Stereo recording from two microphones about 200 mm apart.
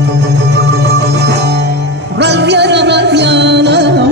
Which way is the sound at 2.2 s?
60° right (ahead or behind).